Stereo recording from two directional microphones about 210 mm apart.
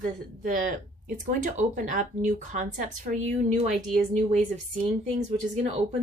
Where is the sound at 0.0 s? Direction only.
40° right (ahead or behind).